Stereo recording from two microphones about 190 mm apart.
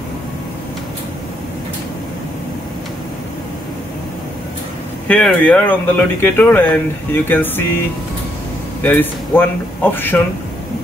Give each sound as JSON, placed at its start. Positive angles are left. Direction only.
{"t": 5.0, "sound": "speech", "side_deg": 5}
{"t": 8.8, "sound": "speech", "side_deg": 10}